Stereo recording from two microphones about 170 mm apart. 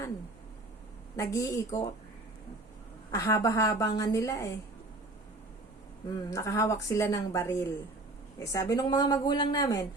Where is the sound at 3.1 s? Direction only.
20° left (ahead or behind).